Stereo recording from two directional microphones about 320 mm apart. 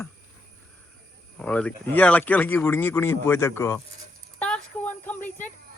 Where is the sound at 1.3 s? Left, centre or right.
Centre.